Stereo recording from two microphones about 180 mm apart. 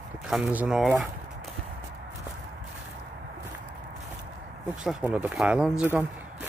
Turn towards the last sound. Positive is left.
turn(degrees=-10)  # may be behind; listen again after turning